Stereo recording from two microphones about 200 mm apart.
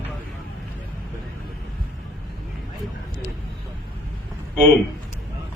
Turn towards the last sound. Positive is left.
turn(degrees=5)  # may be behind; listen again after turning